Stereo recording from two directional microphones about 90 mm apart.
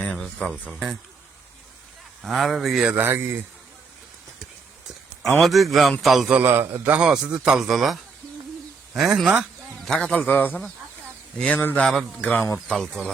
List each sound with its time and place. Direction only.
0.0 s a sound: 10° left (ahead or behind)
2.2 s speech: centre (ahead or behind)
2.9 s a man's voice: 25° right (ahead or behind)
5.4 s speech: centre (ahead or behind)
6.4 s a man's voice: 25° right (ahead or behind); by 7.9 s centre (ahead or behind)
9.4 s speech: 5° left (ahead or behind)